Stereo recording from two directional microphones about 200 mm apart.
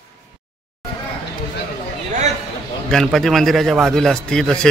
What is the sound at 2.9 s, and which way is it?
A man's voice, centre (ahead or behind).